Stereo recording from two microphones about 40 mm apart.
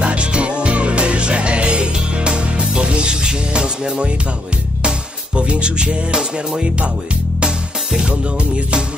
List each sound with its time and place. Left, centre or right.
0.0 s music: right
7.4 s music: centre